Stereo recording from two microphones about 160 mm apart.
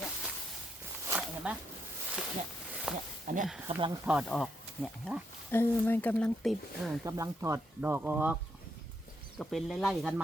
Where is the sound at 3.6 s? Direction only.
30° right (ahead or behind).